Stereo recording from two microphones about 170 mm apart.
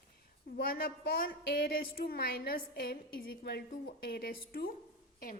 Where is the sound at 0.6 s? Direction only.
60° left (ahead or behind).